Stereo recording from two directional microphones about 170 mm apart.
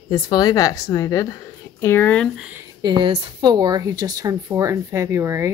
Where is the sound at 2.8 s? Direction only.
30° right (ahead or behind).